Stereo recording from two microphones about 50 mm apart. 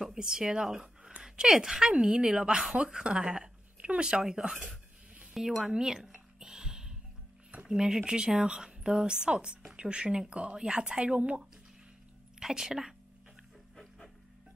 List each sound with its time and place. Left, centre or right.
0.0 s a sound: centre
1.2 s a woman's voice: centre
5.3 s a sound: centre
7.6 s a woman's voice: centre
12.4 s a woman's voice: centre
13.7 s music: centre